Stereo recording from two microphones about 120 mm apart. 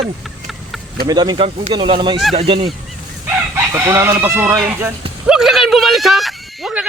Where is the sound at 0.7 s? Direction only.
Centre (ahead or behind).